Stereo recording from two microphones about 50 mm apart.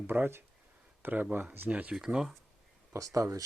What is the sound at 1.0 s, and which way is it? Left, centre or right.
Speech, right.